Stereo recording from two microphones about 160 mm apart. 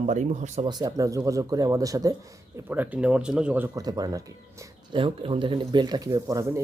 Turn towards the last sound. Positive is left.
turn(degrees=-20)  # may be behind; listen again after turning